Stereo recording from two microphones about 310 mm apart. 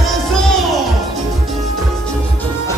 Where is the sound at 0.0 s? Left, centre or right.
Centre.